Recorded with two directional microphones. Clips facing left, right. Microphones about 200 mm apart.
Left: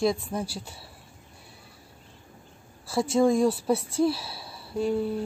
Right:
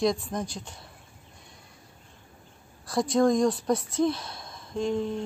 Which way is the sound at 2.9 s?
5° left (ahead or behind).